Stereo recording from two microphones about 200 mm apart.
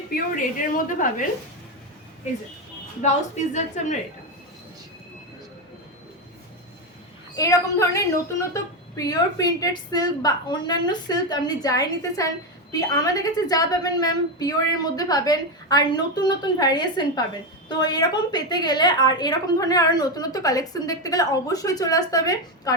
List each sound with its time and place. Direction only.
0.9 s a woman's voice: 40° left (ahead or behind)
3.0 s a woman's voice: 35° left (ahead or behind)
7.3 s a woman's voice: 15° left (ahead or behind)